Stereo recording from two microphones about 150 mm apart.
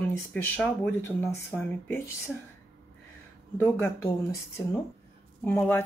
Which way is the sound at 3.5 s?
15° left (ahead or behind).